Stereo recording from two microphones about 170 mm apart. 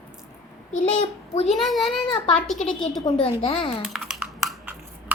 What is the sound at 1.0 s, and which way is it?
Speech, 40° left (ahead or behind).